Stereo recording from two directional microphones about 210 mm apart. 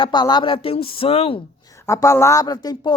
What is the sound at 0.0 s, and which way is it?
Speech, 20° left (ahead or behind).